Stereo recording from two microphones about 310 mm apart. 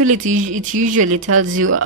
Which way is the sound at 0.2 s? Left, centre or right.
Right.